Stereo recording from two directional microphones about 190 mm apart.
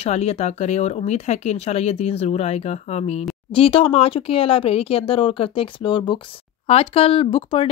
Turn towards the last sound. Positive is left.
turn(degrees=30)  # may be behind; listen again after turning